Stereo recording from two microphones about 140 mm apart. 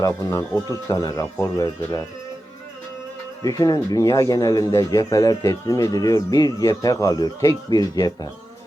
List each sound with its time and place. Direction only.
0.0 s speech: 25° left (ahead or behind)
3.4 s speech: 25° left (ahead or behind)